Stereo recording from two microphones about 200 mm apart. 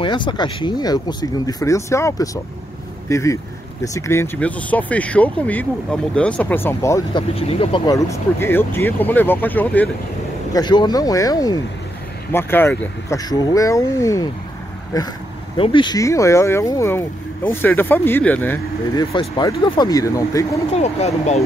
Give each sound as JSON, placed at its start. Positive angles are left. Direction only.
{"t": 0.0, "sound": "speech", "side_deg": 25}
{"t": 7.3, "sound": "speech", "side_deg": 30}
{"t": 10.5, "sound": "speech", "side_deg": 20}
{"t": 18.9, "sound": "speech", "side_deg": 20}
{"t": 20.7, "sound": "speech", "side_deg": 35}